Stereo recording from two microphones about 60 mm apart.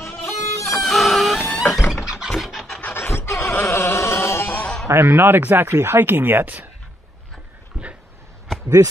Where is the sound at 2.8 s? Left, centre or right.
Left.